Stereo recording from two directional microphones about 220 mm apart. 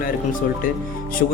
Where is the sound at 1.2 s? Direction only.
45° left (ahead or behind).